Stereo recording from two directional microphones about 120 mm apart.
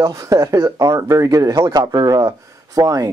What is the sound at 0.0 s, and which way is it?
Speech, 30° right (ahead or behind).